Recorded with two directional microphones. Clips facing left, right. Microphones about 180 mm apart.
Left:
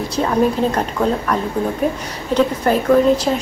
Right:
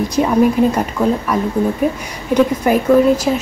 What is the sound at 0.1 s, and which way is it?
Speech, 10° right (ahead or behind).